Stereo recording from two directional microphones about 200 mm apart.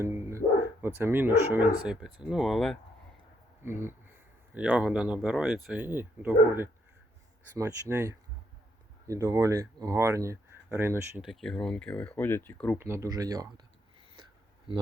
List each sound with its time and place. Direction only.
0.0 s speech: 15° right (ahead or behind)
3.6 s speech: 10° right (ahead or behind)
11.3 s speech: centre (ahead or behind)
12.8 s speech: 15° right (ahead or behind)